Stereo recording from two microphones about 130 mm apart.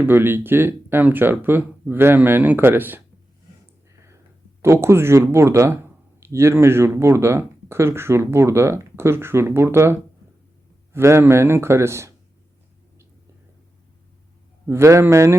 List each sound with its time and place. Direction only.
0.0 s speech: 15° right (ahead or behind)
4.6 s speech: 20° right (ahead or behind)
14.7 s speech: 20° right (ahead or behind)